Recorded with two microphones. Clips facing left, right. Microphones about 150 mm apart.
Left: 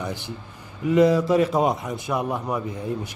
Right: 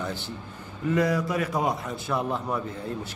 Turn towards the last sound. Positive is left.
turn(degrees=15)  # may be behind; listen again after turning